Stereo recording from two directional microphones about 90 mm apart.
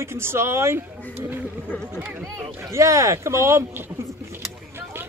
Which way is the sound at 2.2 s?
35° right (ahead or behind).